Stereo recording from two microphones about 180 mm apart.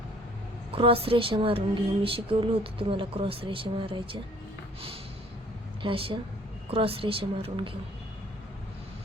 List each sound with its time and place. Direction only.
0.7 s speech: 30° right (ahead or behind)
5.8 s a woman's voice: 30° right (ahead or behind)